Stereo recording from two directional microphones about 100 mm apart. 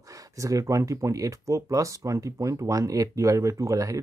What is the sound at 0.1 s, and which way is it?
Speech, 35° right (ahead or behind).